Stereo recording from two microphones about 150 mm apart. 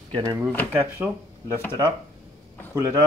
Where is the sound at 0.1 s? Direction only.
30° right (ahead or behind).